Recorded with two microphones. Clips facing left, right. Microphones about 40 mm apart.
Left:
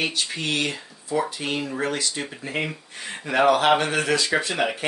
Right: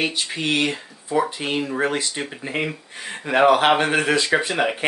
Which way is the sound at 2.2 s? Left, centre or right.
Centre.